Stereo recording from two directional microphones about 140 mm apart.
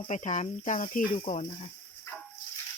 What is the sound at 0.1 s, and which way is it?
Speech, 60° left (ahead or behind).